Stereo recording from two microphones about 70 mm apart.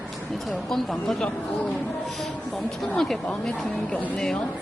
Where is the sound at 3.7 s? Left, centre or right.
Left.